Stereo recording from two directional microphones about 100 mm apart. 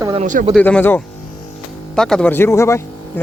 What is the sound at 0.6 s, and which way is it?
Speech, 15° left (ahead or behind).